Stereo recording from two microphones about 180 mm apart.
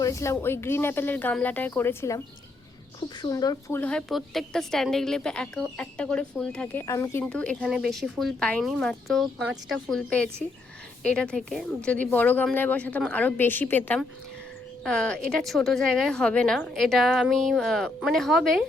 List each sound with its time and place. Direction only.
0.0 s speech: 15° left (ahead or behind)
3.8 s a woman's voice: 5° left (ahead or behind)